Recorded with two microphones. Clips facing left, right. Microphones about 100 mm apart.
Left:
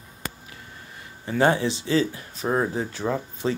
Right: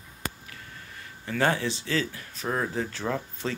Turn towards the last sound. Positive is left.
turn(degrees=10)  # may be behind; listen again after turning